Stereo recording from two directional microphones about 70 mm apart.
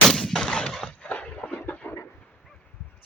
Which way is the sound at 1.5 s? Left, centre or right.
Left.